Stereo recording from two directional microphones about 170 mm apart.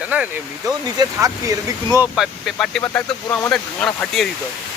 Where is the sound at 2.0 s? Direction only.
Centre (ahead or behind).